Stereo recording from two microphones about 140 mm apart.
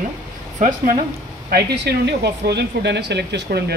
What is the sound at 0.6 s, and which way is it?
Speech, 65° right (ahead or behind).